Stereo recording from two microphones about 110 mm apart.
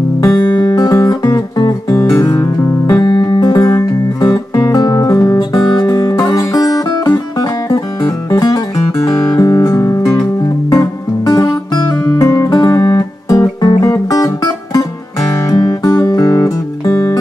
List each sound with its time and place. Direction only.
0.2 s music: 30° left (ahead or behind)
8.3 s guitar: 35° left (ahead or behind)
10.7 s music: 30° left (ahead or behind)